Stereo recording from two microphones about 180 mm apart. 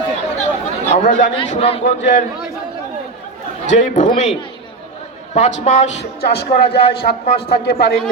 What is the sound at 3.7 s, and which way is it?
Speech, 40° left (ahead or behind).